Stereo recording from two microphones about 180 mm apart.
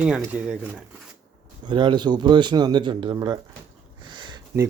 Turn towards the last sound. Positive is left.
turn(degrees=-25)  # may be behind; listen again after turning